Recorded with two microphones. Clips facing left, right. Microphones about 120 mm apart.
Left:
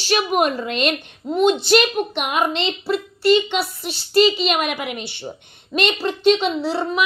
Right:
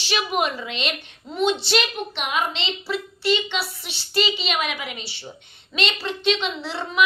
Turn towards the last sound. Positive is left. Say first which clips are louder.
# left 3 dB
turn(degrees=40)  # may be behind; listen again after turning